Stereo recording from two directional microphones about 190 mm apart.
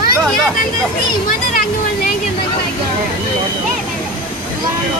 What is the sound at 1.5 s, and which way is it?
Speech, 50° left (ahead or behind).